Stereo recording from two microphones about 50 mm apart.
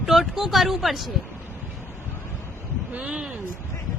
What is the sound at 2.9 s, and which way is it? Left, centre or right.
Speech, right.